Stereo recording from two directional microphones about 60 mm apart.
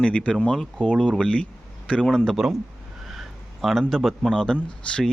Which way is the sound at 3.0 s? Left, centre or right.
Centre.